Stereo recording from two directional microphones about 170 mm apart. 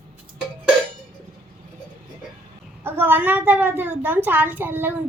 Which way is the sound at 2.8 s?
10° right (ahead or behind).